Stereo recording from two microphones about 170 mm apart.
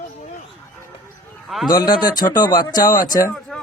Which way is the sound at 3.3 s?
Centre (ahead or behind).